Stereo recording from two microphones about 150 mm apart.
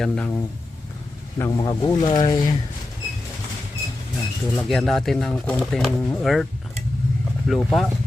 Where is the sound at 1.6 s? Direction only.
25° left (ahead or behind).